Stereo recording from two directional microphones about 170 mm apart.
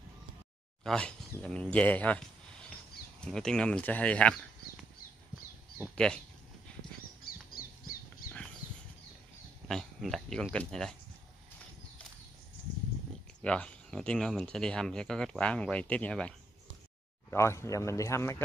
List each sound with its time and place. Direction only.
0.8 s speech: 5° left (ahead or behind)
5.9 s speech: 5° left (ahead or behind)
7.2 s squawk: 60° left (ahead or behind)
9.7 s speech: 5° left (ahead or behind)
13.4 s speech: 5° left (ahead or behind)